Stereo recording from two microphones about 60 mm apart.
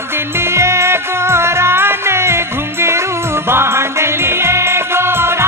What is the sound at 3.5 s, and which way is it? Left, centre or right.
Music, right.